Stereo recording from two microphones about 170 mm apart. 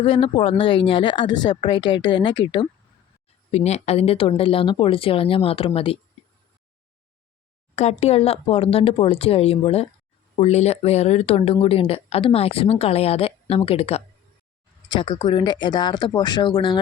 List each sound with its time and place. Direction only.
0.0 s speech: 30° left (ahead or behind)
3.5 s speech: 40° left (ahead or behind)
7.8 s speech: 40° left (ahead or behind)